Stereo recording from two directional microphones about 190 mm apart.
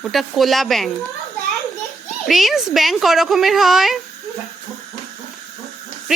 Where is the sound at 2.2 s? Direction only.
Centre (ahead or behind).